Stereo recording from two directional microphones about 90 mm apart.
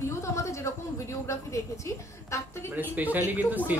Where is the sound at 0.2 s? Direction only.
35° left (ahead or behind).